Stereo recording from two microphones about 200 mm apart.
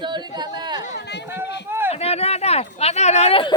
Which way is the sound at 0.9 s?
55° left (ahead or behind).